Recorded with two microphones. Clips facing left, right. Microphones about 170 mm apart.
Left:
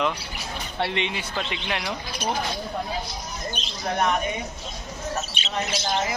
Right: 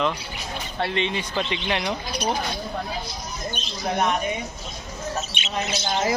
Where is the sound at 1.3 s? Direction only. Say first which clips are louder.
Right 4 dB; centre (ahead or behind).